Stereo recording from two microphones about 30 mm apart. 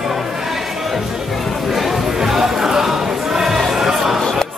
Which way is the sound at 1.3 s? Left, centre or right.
Centre.